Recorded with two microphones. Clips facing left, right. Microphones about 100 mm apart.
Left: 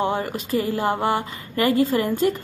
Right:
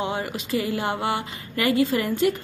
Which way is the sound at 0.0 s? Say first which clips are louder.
Left 4 dB; 45° left (ahead or behind).